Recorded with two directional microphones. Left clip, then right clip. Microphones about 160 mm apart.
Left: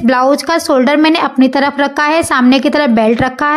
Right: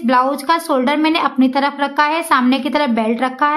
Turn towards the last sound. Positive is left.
turn(degrees=40)  # may be behind; listen again after turning